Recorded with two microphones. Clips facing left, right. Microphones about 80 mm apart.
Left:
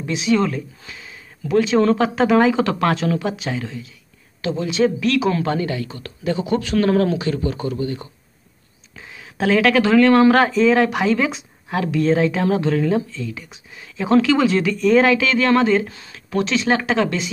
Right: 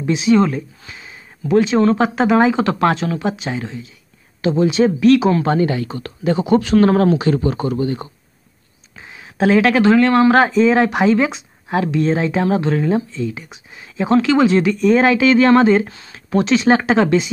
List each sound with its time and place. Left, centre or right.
0.1 s speech: centre
14.0 s speech: centre